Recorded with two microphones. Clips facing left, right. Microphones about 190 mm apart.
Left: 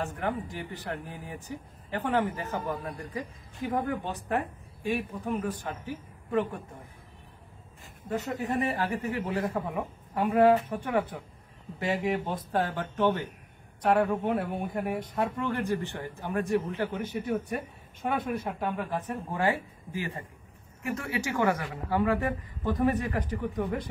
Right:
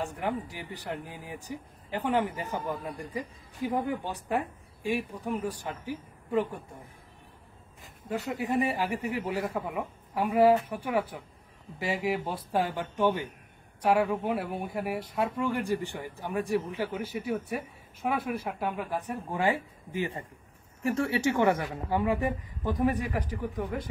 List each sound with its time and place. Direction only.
0.0 s speech: 15° right (ahead or behind)
8.1 s speech: 10° right (ahead or behind)
20.8 s speech: 30° right (ahead or behind); by 23.9 s centre (ahead or behind)